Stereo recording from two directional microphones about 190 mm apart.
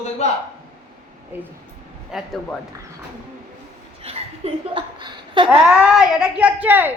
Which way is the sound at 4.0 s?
30° right (ahead or behind).